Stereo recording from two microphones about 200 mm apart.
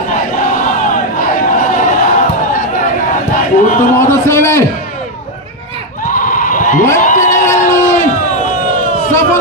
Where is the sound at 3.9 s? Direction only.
15° left (ahead or behind).